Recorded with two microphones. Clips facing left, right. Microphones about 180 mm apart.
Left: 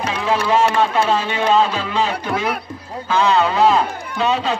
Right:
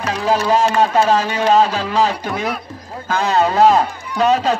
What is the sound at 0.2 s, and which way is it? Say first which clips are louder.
Speech: right 1 dB; 40° right (ahead or behind).